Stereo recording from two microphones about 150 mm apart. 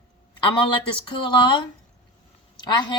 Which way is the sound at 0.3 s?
35° left (ahead or behind).